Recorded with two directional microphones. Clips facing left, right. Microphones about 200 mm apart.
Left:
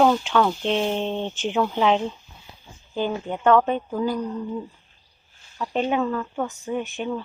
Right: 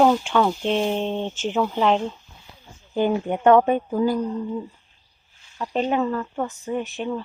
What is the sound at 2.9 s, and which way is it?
Speech, 15° right (ahead or behind).